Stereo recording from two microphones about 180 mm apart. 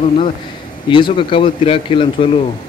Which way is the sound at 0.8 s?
25° left (ahead or behind).